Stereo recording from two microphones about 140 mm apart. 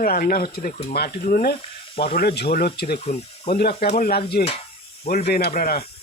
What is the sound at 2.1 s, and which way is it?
Speech, 90° left.